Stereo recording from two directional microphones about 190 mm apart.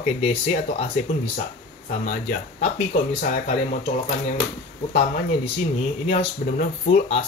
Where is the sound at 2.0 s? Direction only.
45° left (ahead or behind).